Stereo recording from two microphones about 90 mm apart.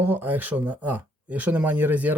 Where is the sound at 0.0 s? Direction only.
20° right (ahead or behind).